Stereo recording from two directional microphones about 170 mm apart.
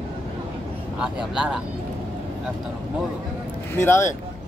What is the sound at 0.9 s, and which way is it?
Speech, 5° right (ahead or behind).